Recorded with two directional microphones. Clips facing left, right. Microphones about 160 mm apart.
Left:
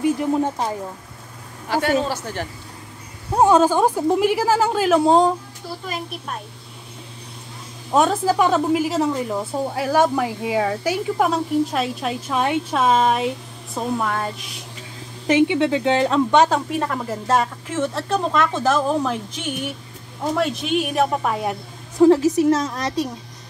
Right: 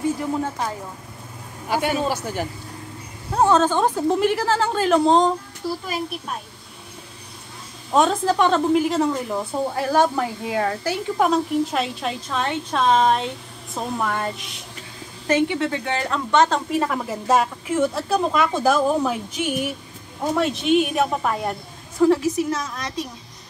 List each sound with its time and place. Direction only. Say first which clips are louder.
0.0 s speech: left 4 dB; 15° left (ahead or behind)
1.7 s a man's voice: left 2 dB; 15° right (ahead or behind)
3.3 s a woman's voice: left 3 dB; 10° left (ahead or behind)
7.9 s a woman's voice: left 1 dB; 5° left (ahead or behind)
15.2 s a woman's voice: left 3 dB; 15° left (ahead or behind)
22.0 s a woman's voice: left 4 dB; 30° left (ahead or behind)